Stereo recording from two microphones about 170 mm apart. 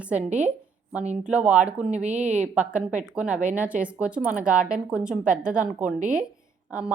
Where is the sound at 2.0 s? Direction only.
45° right (ahead or behind).